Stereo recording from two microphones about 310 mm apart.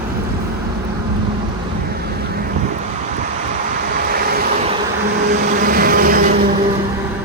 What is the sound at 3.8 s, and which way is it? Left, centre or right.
Vehicle, right.